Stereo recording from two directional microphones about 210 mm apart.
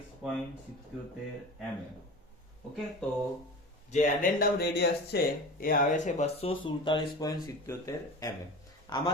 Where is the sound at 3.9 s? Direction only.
40° left (ahead or behind); by 8.3 s 15° left (ahead or behind).